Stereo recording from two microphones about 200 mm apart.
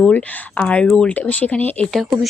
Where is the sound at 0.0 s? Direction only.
5° left (ahead or behind).